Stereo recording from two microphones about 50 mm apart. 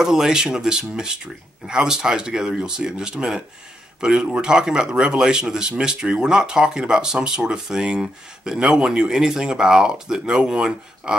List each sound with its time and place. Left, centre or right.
0.0 s speech: centre